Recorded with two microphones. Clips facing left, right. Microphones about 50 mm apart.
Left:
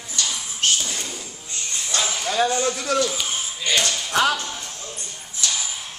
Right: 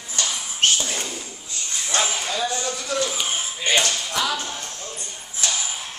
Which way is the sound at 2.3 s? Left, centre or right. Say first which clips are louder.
Left 5 dB; left.